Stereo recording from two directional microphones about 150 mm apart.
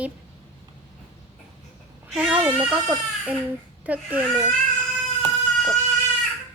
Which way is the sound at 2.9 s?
5° right (ahead or behind).